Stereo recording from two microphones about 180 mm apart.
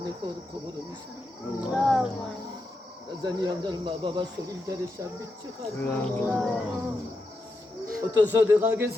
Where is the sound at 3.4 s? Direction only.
25° right (ahead or behind).